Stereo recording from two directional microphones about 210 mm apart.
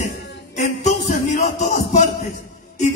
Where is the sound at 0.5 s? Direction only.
35° left (ahead or behind).